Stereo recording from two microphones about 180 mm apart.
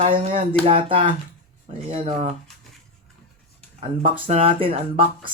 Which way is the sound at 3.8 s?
30° right (ahead or behind).